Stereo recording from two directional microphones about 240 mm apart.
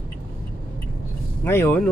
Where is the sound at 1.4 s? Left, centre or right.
Centre.